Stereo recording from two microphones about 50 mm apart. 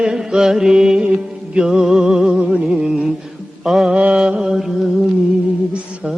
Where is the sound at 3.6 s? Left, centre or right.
Centre.